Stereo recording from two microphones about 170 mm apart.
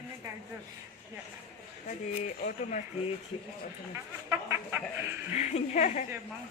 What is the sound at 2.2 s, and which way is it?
Speech, 45° left (ahead or behind).